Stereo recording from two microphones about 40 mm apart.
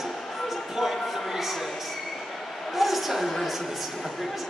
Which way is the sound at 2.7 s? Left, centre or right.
Centre.